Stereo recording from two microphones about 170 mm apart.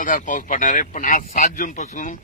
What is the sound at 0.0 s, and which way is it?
A man's voice, 50° left (ahead or behind).